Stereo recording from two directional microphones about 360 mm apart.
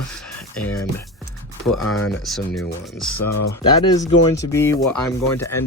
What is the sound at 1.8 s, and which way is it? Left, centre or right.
Speech, left.